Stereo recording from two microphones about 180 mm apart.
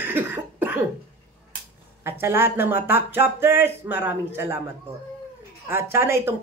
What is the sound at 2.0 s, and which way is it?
Speech, 10° right (ahead or behind).